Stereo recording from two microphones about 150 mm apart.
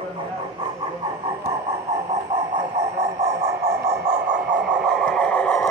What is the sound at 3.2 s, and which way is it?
Radio, 50° right (ahead or behind).